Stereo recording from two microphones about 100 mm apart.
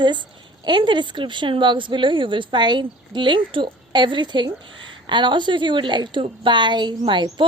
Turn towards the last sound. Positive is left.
turn(degrees=-50)  # may be behind; listen again after turning